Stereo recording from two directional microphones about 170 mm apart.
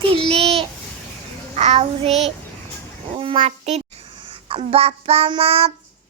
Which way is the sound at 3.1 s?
30° right (ahead or behind).